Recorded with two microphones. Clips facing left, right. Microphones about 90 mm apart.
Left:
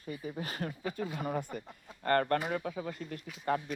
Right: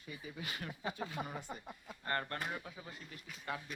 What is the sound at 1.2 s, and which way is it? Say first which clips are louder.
Speech: left 8 dB; 55° left (ahead or behind).